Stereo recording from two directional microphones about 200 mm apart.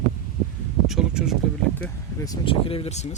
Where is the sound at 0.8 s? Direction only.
5° right (ahead or behind).